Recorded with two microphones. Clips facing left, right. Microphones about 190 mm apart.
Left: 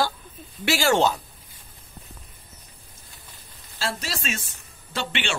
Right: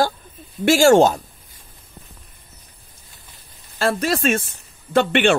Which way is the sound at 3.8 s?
55° right (ahead or behind).